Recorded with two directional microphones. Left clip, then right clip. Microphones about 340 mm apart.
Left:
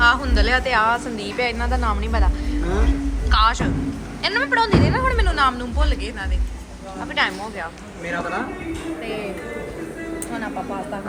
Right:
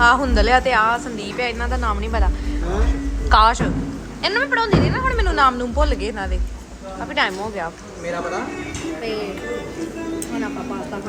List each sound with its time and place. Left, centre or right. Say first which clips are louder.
0.0 s speech: right 2 dB; centre
3.2 s a woman's voice: right 4 dB; centre